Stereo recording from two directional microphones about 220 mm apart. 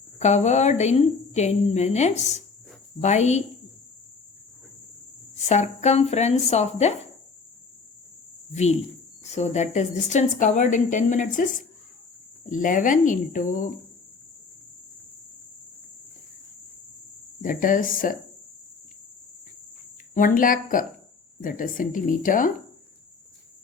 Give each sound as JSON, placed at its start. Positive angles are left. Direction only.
{"t": 0.2, "sound": "a woman's voice", "side_deg": 30}
{"t": 5.3, "sound": "a woman's voice", "side_deg": 30}
{"t": 9.2, "sound": "a woman's voice", "side_deg": 30}
{"t": 12.5, "sound": "a woman's voice", "side_deg": 35}
{"t": 17.4, "sound": "a woman's voice", "side_deg": 40}
{"t": 20.1, "sound": "a woman's voice", "side_deg": 40}